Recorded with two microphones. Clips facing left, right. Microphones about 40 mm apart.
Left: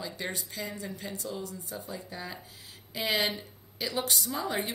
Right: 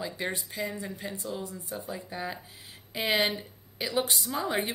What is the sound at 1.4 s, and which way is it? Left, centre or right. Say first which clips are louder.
A woman's voice: right 2 dB; right.